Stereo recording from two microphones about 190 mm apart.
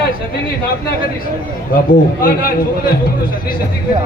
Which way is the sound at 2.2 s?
50° left (ahead or behind).